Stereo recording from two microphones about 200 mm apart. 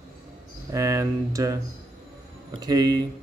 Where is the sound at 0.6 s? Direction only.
15° right (ahead or behind).